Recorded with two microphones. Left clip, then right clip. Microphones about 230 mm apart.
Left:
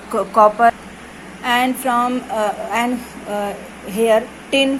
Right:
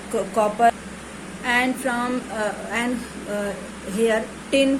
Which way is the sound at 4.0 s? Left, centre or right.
Centre.